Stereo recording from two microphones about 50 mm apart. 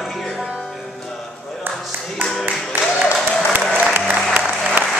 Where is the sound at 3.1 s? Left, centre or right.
Centre.